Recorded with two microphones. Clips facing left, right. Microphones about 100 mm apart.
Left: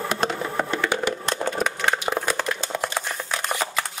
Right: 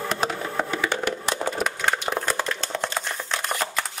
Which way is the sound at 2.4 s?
10° left (ahead or behind).